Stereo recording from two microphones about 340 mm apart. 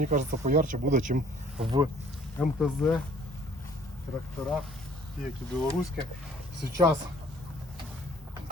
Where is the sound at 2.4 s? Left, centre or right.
Centre.